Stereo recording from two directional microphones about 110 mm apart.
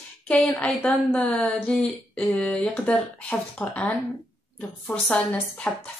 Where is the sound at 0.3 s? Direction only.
10° left (ahead or behind).